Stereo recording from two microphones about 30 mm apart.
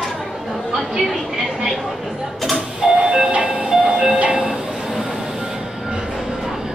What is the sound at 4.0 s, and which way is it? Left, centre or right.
Train, right.